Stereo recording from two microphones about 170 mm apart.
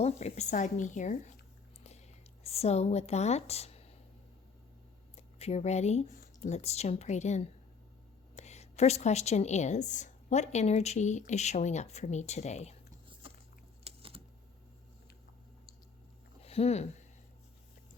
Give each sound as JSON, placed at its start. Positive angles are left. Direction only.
{"t": 0.0, "sound": "a woman's voice", "side_deg": 40}
{"t": 2.4, "sound": "speech", "side_deg": 35}
{"t": 5.1, "sound": "a woman's voice", "side_deg": 40}
{"t": 13.2, "sound": "biting", "side_deg": -30}
{"t": 13.8, "sound": "typing", "side_deg": -35}
{"t": 16.4, "sound": "speech", "side_deg": 35}